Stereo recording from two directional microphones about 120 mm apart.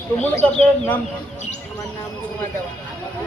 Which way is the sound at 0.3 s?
10° left (ahead or behind).